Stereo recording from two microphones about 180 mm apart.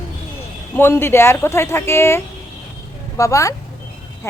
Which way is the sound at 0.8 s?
15° left (ahead or behind).